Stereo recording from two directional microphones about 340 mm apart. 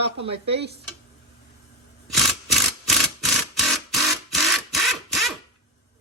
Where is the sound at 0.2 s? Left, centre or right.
Centre.